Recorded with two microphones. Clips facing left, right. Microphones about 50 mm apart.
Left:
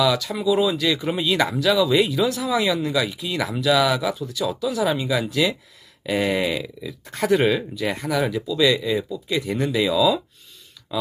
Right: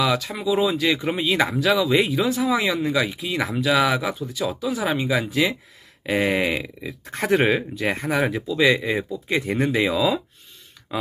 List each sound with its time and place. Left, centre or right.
0.0 s speech: right
3.1 s speech: right
10.9 s a sound: right